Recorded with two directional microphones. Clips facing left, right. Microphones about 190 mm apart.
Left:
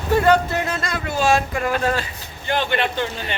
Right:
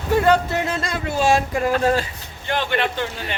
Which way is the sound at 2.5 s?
Centre (ahead or behind).